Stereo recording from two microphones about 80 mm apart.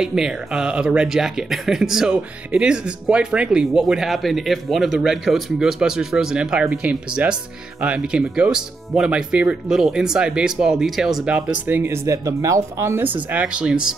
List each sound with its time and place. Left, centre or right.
0.0 s speech: centre
11.6 s speech: right